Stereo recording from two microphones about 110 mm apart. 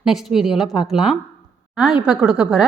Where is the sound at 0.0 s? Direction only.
5° right (ahead or behind).